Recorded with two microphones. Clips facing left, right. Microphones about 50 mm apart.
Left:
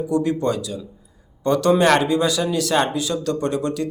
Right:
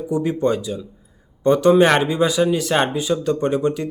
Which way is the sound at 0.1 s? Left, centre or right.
Centre.